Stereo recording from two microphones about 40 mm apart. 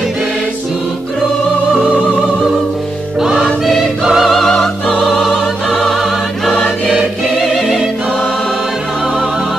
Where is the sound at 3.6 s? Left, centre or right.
Centre.